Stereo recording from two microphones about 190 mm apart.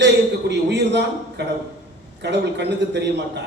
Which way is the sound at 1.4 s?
60° right (ahead or behind).